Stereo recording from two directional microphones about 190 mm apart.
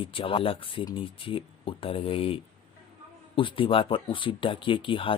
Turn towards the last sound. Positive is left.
turn(degrees=25)  # may be behind; listen again after turning